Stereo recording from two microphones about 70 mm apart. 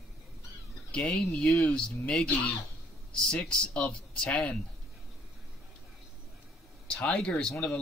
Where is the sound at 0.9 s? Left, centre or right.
Centre.